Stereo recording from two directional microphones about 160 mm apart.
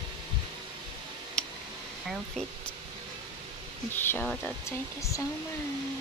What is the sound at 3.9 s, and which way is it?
Speech, 10° left (ahead or behind).